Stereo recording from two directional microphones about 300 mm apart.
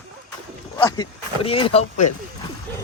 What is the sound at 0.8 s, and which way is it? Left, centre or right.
Speech, centre.